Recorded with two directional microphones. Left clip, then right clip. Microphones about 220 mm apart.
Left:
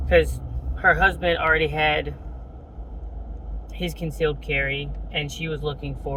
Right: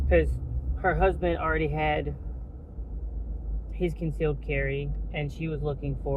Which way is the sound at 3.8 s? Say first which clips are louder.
Left 4 dB; 25° left (ahead or behind).